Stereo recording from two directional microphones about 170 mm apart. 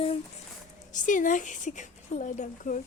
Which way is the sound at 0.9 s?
50° left (ahead or behind).